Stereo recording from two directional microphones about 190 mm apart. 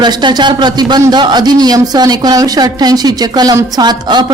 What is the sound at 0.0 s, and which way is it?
A man's voice, 20° right (ahead or behind).